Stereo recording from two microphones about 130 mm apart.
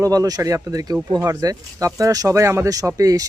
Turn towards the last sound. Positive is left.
turn(degrees=-25)  # may be behind; listen again after turning